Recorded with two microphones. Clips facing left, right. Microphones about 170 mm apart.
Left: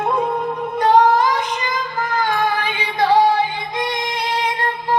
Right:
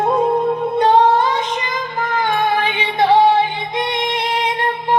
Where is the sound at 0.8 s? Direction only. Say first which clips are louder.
Even; 30° right (ahead or behind).